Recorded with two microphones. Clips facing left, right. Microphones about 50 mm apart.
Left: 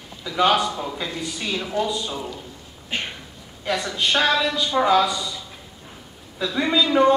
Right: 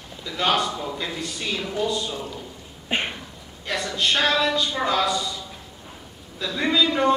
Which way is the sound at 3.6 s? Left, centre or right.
Centre.